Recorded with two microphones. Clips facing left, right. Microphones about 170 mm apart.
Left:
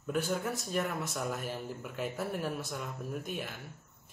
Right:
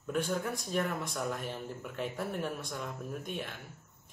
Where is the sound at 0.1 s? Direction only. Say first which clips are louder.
Even; 5° left (ahead or behind).